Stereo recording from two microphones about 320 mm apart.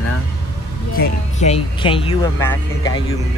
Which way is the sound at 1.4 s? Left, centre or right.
Centre.